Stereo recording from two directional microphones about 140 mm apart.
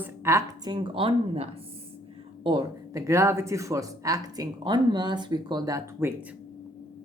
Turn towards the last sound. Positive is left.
turn(degrees=-20)  # may be behind; listen again after turning